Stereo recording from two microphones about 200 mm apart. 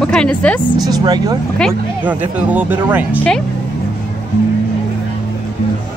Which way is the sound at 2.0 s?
10° right (ahead or behind).